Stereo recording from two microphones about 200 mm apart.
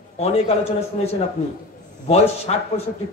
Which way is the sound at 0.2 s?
30° left (ahead or behind).